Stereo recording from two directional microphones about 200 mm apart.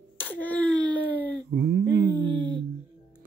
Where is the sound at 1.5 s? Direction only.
55° right (ahead or behind).